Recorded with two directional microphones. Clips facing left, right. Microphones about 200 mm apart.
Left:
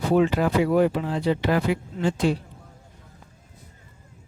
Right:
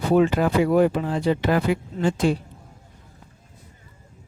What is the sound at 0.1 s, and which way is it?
Speech, 50° right (ahead or behind).